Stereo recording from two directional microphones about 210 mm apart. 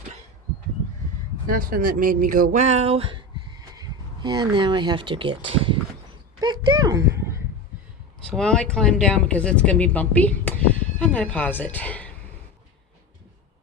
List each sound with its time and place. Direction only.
1.5 s speech: 45° right (ahead or behind); by 7.2 s 15° right (ahead or behind)
8.3 s speech: 5° left (ahead or behind)